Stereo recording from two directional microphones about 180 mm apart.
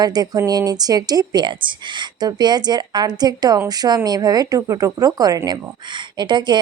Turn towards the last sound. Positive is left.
turn(degrees=-25)  # may be behind; listen again after turning